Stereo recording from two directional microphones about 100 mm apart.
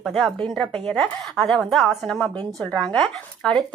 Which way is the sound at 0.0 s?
Centre (ahead or behind).